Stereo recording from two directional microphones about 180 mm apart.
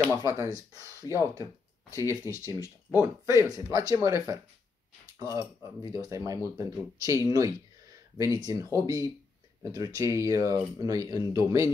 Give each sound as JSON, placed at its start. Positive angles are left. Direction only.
{"t": 0.1, "sound": "speech", "side_deg": -15}
{"t": 1.0, "sound": "speech", "side_deg": 20}
{"t": 2.2, "sound": "speech", "side_deg": 15}
{"t": 2.9, "sound": "speech", "side_deg": -15}